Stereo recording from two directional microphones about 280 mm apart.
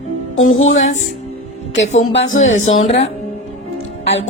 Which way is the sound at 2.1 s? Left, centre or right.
Left.